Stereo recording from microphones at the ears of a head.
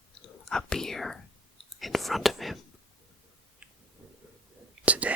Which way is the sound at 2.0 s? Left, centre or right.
Centre.